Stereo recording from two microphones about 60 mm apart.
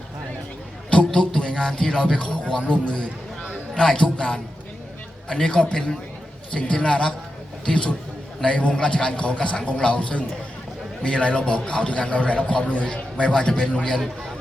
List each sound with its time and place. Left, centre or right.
0.9 s a man's voice: centre